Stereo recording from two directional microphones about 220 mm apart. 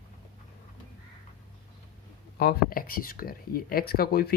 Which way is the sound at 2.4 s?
40° left (ahead or behind).